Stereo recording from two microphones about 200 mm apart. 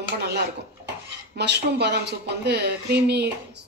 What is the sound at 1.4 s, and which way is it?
A woman's voice, 55° right (ahead or behind).